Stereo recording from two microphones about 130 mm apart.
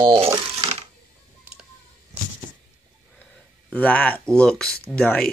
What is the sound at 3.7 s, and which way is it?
Speech, 10° left (ahead or behind).